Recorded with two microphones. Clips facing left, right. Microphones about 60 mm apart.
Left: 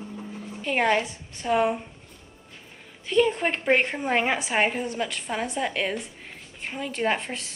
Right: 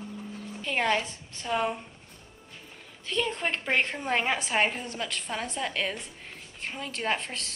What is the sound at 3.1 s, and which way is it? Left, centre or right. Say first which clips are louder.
A woman's voice: left 7 dB; centre.